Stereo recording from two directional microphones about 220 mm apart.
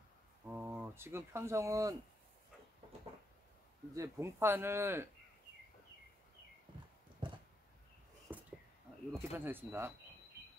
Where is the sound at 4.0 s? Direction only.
10° right (ahead or behind).